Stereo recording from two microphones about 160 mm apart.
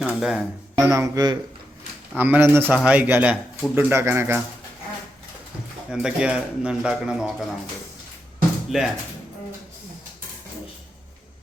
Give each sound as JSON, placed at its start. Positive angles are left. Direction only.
{"t": 0.0, "sound": "a sound", "side_deg": 0}
{"t": 0.9, "sound": "speech", "side_deg": -20}
{"t": 2.1, "sound": "a man's voice", "side_deg": -10}
{"t": 5.9, "sound": "speech", "side_deg": -5}
{"t": 8.7, "sound": "speech", "side_deg": -5}